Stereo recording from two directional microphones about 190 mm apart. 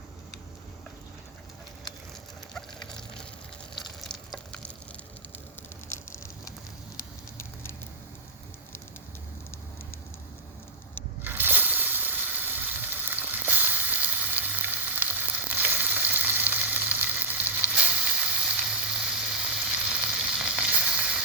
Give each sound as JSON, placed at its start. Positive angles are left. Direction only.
{"t": 2.5, "sound": "a sound", "side_deg": 5}
{"t": 7.3, "sound": "patter", "side_deg": 10}
{"t": 11.2, "sound": "water", "side_deg": -10}